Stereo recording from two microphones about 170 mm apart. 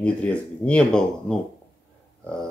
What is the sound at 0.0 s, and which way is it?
Speech, 5° left (ahead or behind).